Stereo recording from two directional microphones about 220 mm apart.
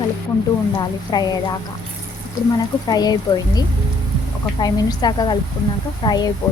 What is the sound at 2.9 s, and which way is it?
Speech, 20° left (ahead or behind).